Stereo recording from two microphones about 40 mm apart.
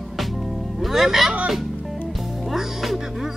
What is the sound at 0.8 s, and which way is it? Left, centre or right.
Speech, centre.